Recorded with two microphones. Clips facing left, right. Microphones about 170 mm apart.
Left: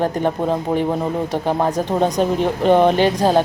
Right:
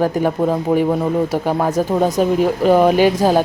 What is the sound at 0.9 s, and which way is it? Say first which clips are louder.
Speech: right 4 dB; 10° left (ahead or behind).